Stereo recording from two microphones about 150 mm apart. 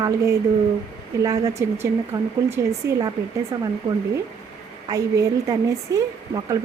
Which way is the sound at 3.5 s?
30° right (ahead or behind).